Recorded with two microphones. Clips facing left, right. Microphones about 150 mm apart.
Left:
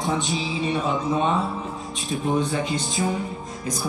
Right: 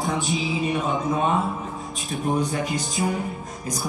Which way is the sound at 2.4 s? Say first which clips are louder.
Left 1 dB; 25° left (ahead or behind).